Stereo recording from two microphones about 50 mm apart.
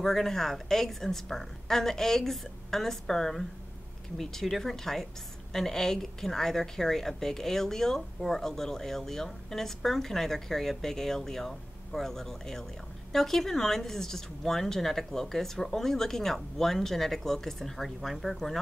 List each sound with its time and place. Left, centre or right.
0.0 s a woman's voice: centre